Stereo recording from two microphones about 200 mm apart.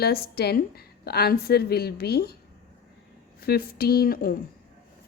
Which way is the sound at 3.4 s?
50° left (ahead or behind).